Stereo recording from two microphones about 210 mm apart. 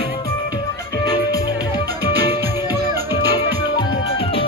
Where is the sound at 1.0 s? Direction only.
20° left (ahead or behind).